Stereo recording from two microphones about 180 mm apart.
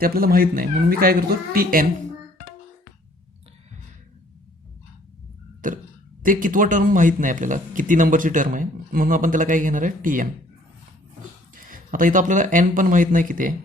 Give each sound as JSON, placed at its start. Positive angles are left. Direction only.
{"t": 0.0, "sound": "speech", "side_deg": -55}
{"t": 5.6, "sound": "speech", "side_deg": -50}
{"t": 11.7, "sound": "speech", "side_deg": -50}